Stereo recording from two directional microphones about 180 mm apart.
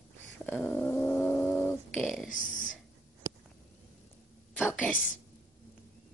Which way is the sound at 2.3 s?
45° left (ahead or behind).